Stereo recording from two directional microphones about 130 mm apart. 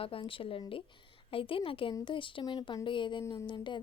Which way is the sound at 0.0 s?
45° left (ahead or behind).